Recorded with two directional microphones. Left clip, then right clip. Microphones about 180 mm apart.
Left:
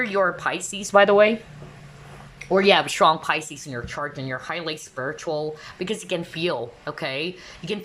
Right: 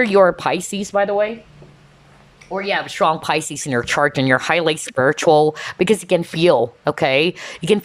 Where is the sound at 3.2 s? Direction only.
25° right (ahead or behind).